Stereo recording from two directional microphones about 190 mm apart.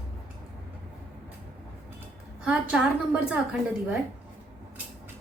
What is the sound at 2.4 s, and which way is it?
Speech, 5° right (ahead or behind).